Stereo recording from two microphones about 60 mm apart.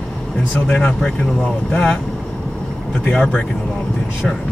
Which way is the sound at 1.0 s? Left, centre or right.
Centre.